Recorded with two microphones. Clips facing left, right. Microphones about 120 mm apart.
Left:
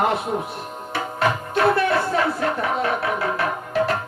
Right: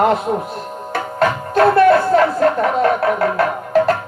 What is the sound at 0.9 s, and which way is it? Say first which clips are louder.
Music: right 5 dB; 45° right (ahead or behind).